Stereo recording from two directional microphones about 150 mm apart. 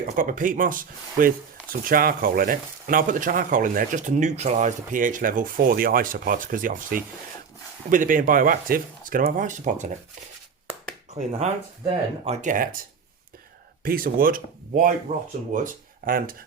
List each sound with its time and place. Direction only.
0.2 s speech: 60° right (ahead or behind)
11.1 s speech: 45° right (ahead or behind); by 12.8 s 60° right (ahead or behind)
13.8 s speech: 70° right (ahead or behind)